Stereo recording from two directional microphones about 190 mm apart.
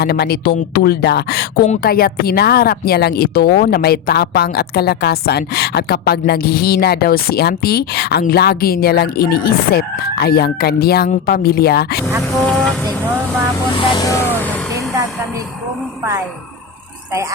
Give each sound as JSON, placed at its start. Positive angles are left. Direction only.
{"t": 0.0, "sound": "a woman's voice", "side_deg": 55}
{"t": 12.5, "sound": "vehicle", "side_deg": 5}
{"t": 13.7, "sound": "vehicle", "side_deg": 20}